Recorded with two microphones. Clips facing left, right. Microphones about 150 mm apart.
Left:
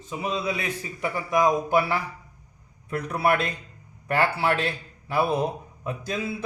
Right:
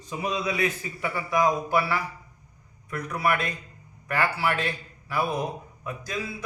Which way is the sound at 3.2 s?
30° left (ahead or behind).